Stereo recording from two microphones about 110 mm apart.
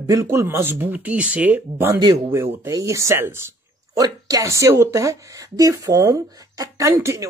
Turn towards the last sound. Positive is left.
turn(degrees=-25)  # may be behind; listen again after turning